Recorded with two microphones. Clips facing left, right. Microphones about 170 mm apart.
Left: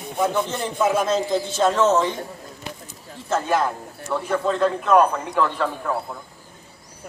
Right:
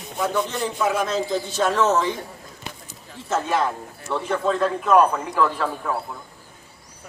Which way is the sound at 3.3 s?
Centre (ahead or behind).